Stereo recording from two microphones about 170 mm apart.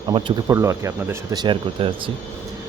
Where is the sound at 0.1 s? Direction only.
25° right (ahead or behind).